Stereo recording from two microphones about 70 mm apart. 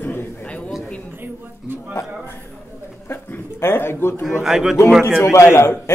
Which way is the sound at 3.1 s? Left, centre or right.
Left.